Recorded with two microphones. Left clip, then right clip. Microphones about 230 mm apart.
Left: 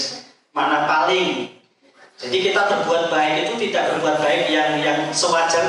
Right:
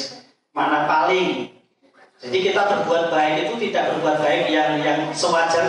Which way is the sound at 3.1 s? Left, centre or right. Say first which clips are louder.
Even; centre.